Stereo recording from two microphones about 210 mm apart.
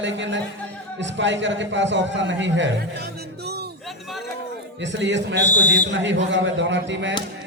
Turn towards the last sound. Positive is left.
turn(degrees=-60)  # may be behind; listen again after turning